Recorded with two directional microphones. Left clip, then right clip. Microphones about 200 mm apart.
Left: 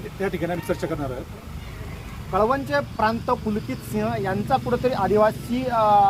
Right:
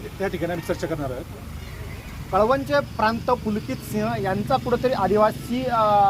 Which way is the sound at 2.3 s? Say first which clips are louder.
Right 2 dB; 45° right (ahead or behind).